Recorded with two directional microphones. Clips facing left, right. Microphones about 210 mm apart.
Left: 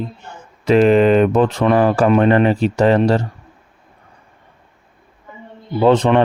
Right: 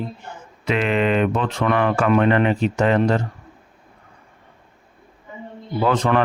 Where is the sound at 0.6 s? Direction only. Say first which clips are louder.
Left 9 dB; 40° left (ahead or behind).